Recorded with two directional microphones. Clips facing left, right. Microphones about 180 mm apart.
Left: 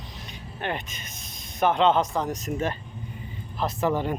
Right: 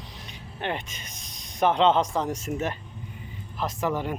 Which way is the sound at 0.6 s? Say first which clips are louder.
Even; 25° right (ahead or behind).